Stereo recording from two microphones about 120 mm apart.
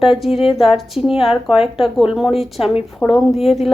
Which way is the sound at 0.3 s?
55° left (ahead or behind).